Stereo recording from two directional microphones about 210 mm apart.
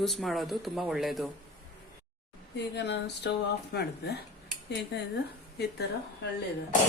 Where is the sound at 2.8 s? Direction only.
55° left (ahead or behind).